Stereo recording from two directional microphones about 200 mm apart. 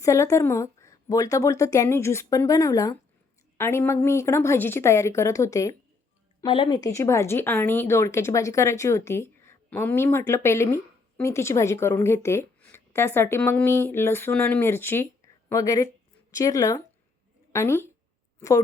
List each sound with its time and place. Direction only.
0.0 s speech: 15° left (ahead or behind)